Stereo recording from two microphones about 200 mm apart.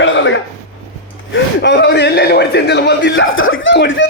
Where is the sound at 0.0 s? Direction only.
65° left (ahead or behind).